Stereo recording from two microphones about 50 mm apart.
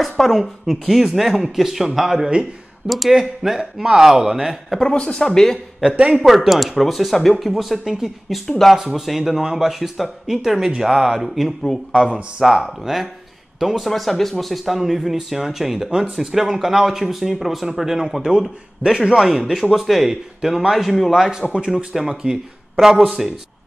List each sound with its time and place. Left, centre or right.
0.0 s speech: centre
4.9 s speech: centre
5.8 s speech: centre
6.2 s speech: centre
21.1 s speech: centre